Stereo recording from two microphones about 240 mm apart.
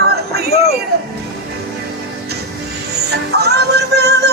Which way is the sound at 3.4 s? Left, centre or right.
Right.